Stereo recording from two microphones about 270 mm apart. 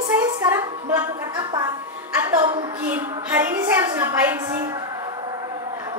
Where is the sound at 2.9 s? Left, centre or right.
Centre.